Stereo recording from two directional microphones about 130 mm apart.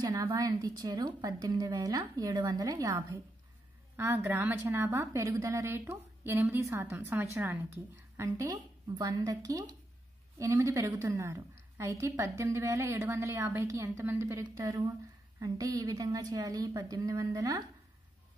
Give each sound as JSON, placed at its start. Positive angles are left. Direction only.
{"t": 0.1, "sound": "a woman's voice", "side_deg": -30}